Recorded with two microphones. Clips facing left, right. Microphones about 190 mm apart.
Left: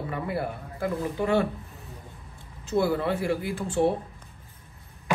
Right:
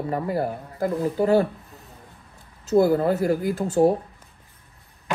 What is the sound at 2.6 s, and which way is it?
Speech, 40° right (ahead or behind).